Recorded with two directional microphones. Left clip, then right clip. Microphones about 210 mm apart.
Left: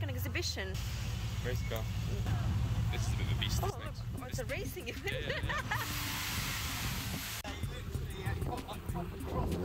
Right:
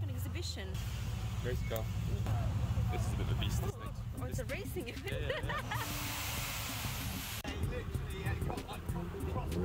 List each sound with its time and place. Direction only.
0.4 s speech: centre (ahead or behind)
2.9 s speech: 50° right (ahead or behind)
5.3 s music: 10° right (ahead or behind)